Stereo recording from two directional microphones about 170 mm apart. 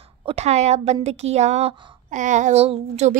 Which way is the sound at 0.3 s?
40° right (ahead or behind).